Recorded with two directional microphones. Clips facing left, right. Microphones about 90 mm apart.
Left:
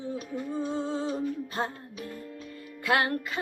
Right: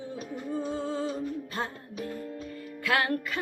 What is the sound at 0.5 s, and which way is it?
Music, 25° left (ahead or behind).